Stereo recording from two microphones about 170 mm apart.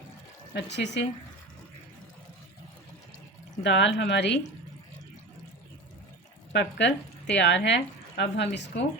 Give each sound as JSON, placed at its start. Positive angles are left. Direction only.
{"t": 0.5, "sound": "speech", "side_deg": 90}
{"t": 3.6, "sound": "speech", "side_deg": 90}
{"t": 6.5, "sound": "speech", "side_deg": 90}